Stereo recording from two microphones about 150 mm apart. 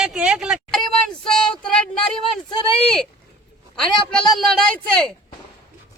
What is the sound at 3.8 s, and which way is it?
Speech, 5° left (ahead or behind).